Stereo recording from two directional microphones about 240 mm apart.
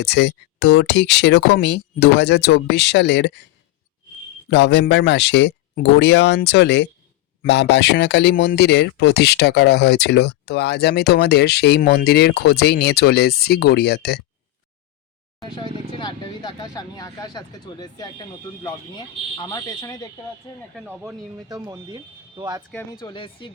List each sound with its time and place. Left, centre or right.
0.0 s speech: left
4.4 s speech: left
15.4 s speech: centre
20.7 s speech: centre
22.7 s speech: centre